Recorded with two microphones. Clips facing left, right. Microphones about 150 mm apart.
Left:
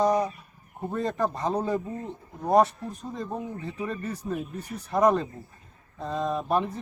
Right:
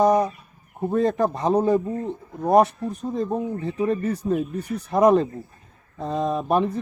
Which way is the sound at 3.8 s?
60° right (ahead or behind).